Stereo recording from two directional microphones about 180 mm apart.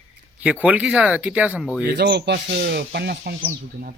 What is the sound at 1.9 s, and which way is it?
Speech, 65° right (ahead or behind).